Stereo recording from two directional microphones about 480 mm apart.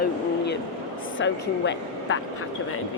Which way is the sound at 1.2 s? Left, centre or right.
Left.